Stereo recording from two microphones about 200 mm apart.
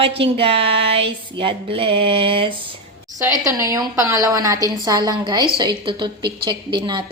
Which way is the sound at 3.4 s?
15° right (ahead or behind).